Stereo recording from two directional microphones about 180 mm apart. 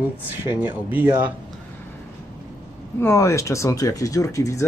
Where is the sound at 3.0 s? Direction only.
15° left (ahead or behind).